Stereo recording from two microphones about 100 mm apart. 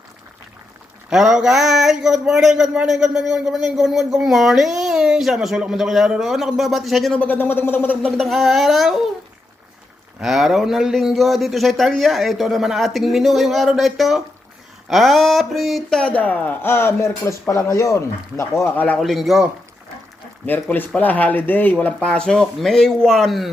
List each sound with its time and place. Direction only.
1.1 s speech: 5° right (ahead or behind)
7.2 s speech: 20° left (ahead or behind)
8.0 s speech: centre (ahead or behind)
10.2 s speech: 5° right (ahead or behind); by 18.7 s 30° left (ahead or behind)
18.9 s speech: centre (ahead or behind)
20.5 s speech: 15° left (ahead or behind)